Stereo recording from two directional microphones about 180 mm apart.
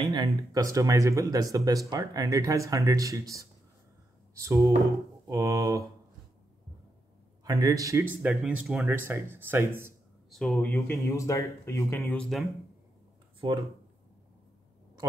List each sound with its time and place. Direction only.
0.0 s speech: 25° right (ahead or behind)
7.4 s speech: 20° right (ahead or behind)
10.3 s speech: 5° left (ahead or behind)
13.4 s speech: 25° right (ahead or behind)